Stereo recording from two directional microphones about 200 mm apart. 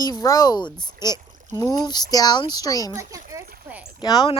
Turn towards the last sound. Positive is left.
turn(degrees=25)  # may be behind; listen again after turning